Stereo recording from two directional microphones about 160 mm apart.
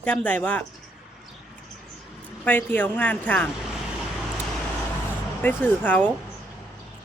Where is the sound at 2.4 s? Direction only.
10° left (ahead or behind).